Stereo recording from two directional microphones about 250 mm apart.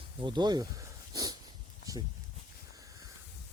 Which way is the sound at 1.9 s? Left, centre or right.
Centre.